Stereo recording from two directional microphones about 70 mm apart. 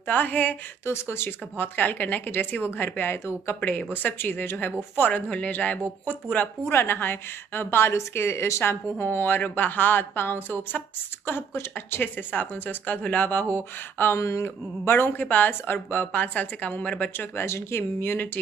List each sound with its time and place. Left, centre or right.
0.0 s speech: left
0.8 s speech: left
6.7 s a woman's voice: left
14.1 s speech: left; by 17.1 s centre
17.1 s a woman's voice: left